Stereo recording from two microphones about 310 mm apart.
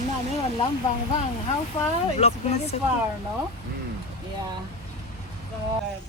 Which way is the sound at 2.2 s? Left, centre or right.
Centre.